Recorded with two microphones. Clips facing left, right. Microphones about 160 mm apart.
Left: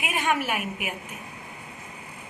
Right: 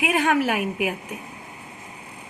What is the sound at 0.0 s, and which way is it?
Speech, 90° right.